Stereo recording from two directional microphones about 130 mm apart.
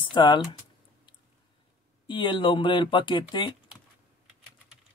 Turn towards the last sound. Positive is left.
turn(degrees=35)  # may be behind; listen again after turning